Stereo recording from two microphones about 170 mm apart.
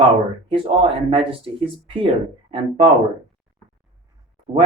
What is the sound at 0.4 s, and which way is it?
Speech, 30° right (ahead or behind).